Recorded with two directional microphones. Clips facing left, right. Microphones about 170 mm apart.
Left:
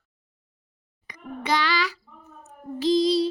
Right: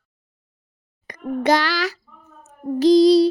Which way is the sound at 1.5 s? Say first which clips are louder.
Right 4 dB; 90° right.